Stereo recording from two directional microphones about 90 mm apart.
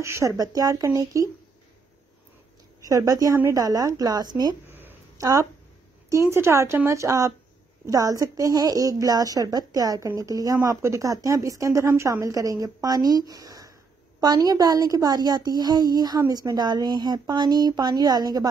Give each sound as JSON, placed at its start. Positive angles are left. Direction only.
{"t": 0.0, "sound": "a woman's voice", "side_deg": -30}
{"t": 2.8, "sound": "a woman's voice", "side_deg": -40}
{"t": 4.6, "sound": "a sound", "side_deg": -25}
{"t": 5.1, "sound": "a woman's voice", "side_deg": -40}